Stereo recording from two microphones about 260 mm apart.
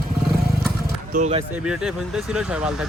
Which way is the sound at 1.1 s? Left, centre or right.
Right.